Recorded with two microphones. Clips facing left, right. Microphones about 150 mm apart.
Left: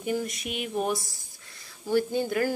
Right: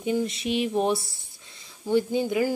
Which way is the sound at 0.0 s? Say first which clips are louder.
Right 4 dB; 20° right (ahead or behind).